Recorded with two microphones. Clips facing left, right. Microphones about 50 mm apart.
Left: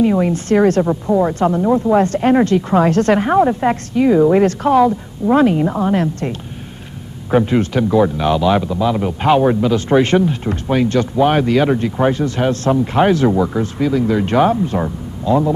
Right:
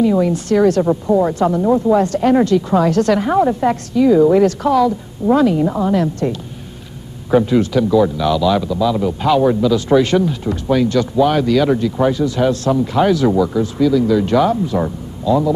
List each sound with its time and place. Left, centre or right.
0.0 s speech: left
1.6 s speech: centre
2.0 s speech: left